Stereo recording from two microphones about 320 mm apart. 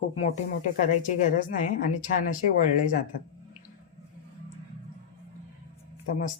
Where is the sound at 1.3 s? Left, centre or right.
Left.